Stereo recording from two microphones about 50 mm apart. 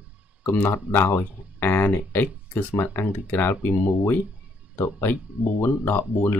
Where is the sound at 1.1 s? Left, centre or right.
Left.